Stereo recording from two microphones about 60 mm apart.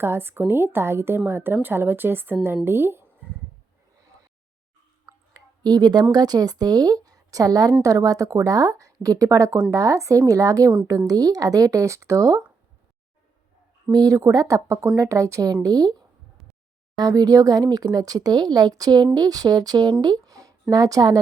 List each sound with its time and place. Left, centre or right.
0.0 s a woman's voice: right
5.7 s speech: right
14.0 s speech: right
15.6 s speech: right
20.2 s a sound: right